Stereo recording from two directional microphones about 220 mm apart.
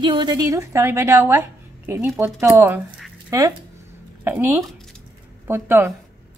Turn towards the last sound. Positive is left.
turn(degrees=-10)  # may be behind; listen again after turning